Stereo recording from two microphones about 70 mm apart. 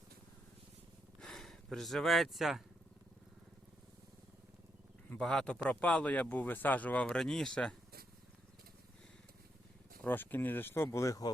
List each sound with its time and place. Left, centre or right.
1.2 s speech: centre
5.2 s speech: centre
7.1 s speech: centre
10.0 s speech: left
10.8 s speech: left